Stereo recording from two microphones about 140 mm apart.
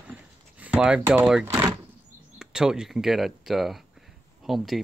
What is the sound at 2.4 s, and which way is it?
Speech, 5° right (ahead or behind).